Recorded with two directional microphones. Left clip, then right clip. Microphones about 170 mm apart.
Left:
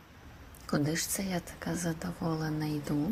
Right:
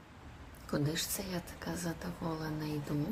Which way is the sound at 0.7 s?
25° left (ahead or behind).